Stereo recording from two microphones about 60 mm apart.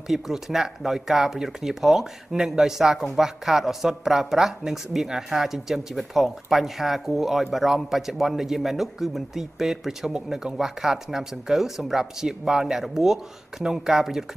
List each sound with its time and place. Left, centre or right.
0.1 s speech: centre